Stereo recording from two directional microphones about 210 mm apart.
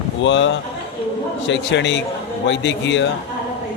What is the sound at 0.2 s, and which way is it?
A man's voice, 60° left (ahead or behind).